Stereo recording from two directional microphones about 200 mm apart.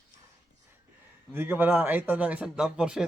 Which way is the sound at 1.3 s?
10° right (ahead or behind).